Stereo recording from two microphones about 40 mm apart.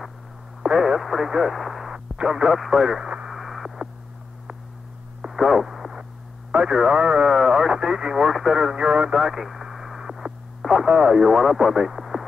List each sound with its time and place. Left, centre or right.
0.6 s radio: centre
1.3 s speech: centre
1.9 s radio: centre
2.8 s speech: centre
3.3 s a sound: centre
5.3 s radio: centre
6.5 s speech: centre
7.3 s speech: centre
8.3 s speech: centre
8.7 s speech: right
9.1 s radio: centre
10.9 s speech: centre
11.1 s speech: centre